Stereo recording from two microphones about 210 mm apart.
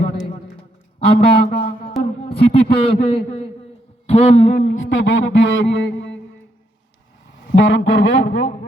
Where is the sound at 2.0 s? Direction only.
25° left (ahead or behind).